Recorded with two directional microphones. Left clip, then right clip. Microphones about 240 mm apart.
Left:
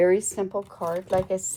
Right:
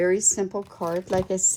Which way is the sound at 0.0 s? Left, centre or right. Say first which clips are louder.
Left 1 dB; centre.